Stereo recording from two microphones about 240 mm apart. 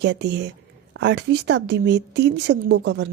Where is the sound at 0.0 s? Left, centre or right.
Right.